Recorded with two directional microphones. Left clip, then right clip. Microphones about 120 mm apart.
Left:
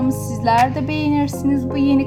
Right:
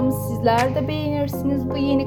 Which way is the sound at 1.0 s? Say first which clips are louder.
Left 4 dB; 30° right (ahead or behind).